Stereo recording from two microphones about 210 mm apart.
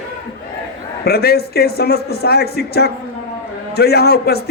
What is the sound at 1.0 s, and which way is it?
A man's voice, 50° left (ahead or behind).